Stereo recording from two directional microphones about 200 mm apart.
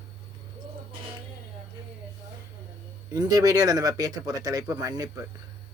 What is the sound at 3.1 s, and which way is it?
Speech, 20° right (ahead or behind).